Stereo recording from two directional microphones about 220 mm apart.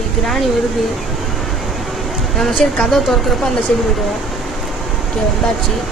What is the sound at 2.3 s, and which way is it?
Speech, centre (ahead or behind).